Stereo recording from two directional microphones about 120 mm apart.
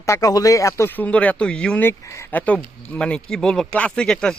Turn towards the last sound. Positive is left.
turn(degrees=5)  # may be behind; listen again after turning